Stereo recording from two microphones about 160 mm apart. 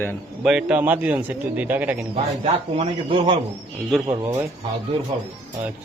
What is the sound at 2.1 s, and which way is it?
A man's voice, 40° right (ahead or behind).